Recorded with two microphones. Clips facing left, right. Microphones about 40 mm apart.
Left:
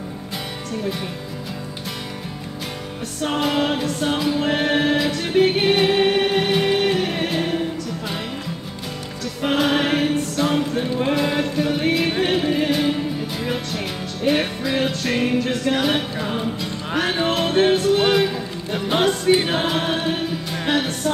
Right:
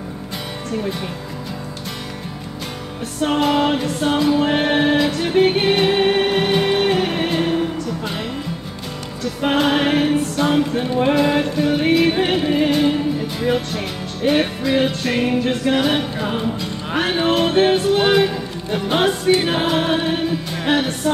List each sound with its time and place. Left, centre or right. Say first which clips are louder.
3.3 s music: right 4 dB; centre
7.2 s choir: right 3 dB; centre
9.4 s music: right 2 dB; centre
12.2 s music: right 2 dB; centre
15.4 s music: right 3 dB; centre
15.8 s music: right 2 dB; centre